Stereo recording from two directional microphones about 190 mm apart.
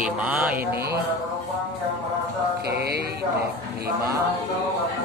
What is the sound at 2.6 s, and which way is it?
Music, 55° right (ahead or behind).